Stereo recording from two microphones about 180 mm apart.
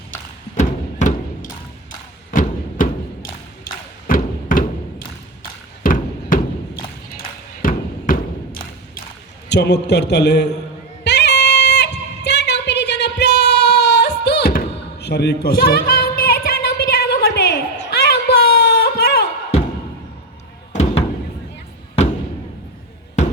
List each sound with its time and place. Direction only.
0.5 s music: 40° left (ahead or behind)
4.0 s thump: 50° left (ahead or behind)
5.8 s a sound: 50° left (ahead or behind)
7.6 s a sound: 50° left (ahead or behind)
9.5 s a man's voice: 70° left (ahead or behind)
11.0 s music: 70° left (ahead or behind)